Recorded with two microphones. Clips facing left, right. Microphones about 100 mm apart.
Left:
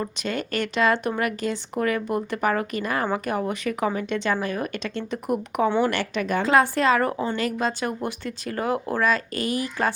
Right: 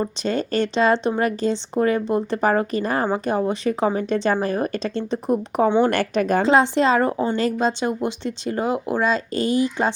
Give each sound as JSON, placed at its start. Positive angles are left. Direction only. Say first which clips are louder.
{"t": 0.0, "sound": "speech", "louder": "right 5 dB", "side_deg": -30}
{"t": 5.9, "sound": "speech", "louder": "right 5 dB", "side_deg": -40}
{"t": 6.5, "sound": "a woman's voice", "louder": "right 1 dB", "side_deg": -25}